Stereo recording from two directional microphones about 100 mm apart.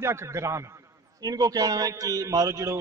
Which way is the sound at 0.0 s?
25° right (ahead or behind).